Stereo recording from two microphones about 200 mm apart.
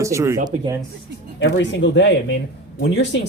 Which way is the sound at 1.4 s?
65° left (ahead or behind).